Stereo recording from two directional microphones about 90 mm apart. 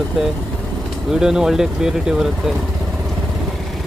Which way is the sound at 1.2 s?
5° right (ahead or behind).